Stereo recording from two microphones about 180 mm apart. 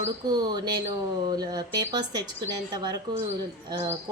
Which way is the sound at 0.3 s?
20° right (ahead or behind).